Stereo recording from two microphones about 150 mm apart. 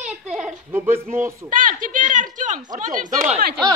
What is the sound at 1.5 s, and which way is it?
Speech, 60° right (ahead or behind).